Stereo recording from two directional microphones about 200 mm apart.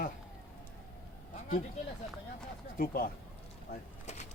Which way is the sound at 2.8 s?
45° left (ahead or behind).